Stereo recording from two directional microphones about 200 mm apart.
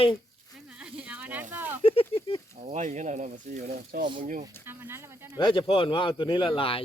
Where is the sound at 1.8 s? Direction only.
25° left (ahead or behind).